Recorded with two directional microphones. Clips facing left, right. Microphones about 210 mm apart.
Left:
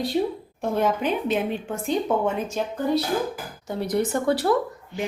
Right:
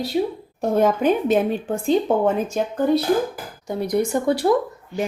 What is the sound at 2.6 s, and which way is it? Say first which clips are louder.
Speech: right 4 dB; 50° right (ahead or behind).